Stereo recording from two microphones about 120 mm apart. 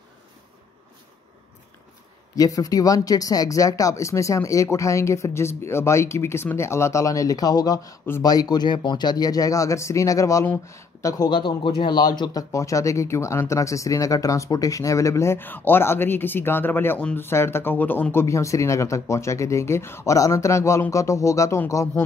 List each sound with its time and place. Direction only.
2.3 s speech: 30° left (ahead or behind)
11.2 s speech: 40° left (ahead or behind); by 22.0 s 25° left (ahead or behind)